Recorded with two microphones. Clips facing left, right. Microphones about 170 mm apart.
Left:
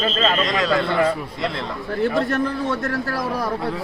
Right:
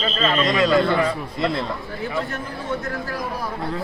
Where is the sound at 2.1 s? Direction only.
70° left (ahead or behind).